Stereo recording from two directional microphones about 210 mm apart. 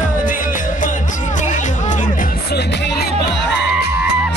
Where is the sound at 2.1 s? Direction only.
50° left (ahead or behind).